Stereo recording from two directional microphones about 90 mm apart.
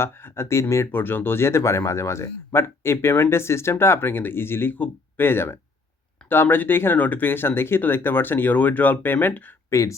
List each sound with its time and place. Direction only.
0.0 s speech: 30° left (ahead or behind)
9.6 s speech: 35° left (ahead or behind)